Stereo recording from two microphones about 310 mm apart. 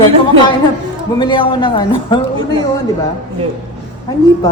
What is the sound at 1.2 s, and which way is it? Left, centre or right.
A woman's voice, centre.